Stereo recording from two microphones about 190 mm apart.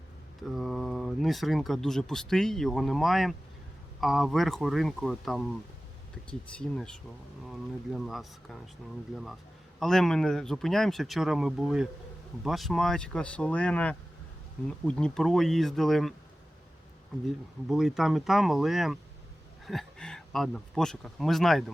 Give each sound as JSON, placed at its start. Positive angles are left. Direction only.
{"t": 0.5, "sound": "speech", "side_deg": 0}
{"t": 6.5, "sound": "speech", "side_deg": 5}
{"t": 17.7, "sound": "speech", "side_deg": 0}